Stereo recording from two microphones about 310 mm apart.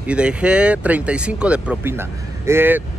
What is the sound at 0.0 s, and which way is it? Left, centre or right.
Speech, centre.